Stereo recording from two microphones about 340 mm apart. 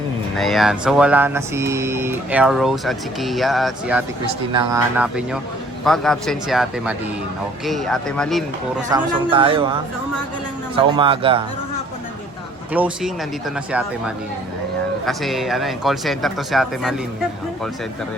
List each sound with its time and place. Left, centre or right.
0.3 s speech: centre
8.9 s a man's voice: centre
10.9 s a man's voice: centre
12.7 s speech: centre
15.0 s speech: centre